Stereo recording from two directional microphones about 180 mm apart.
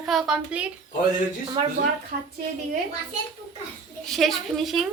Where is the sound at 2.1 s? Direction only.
55° right (ahead or behind).